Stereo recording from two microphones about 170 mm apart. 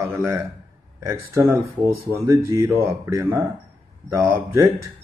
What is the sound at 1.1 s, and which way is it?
Speech, 15° right (ahead or behind).